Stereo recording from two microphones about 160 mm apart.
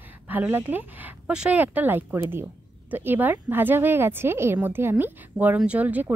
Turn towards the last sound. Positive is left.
turn(degrees=-10)  # may be behind; listen again after turning